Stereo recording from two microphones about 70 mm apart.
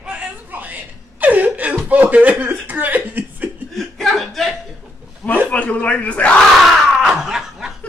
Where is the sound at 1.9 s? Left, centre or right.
Right.